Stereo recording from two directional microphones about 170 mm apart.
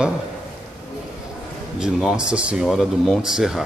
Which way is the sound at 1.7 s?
5° right (ahead or behind).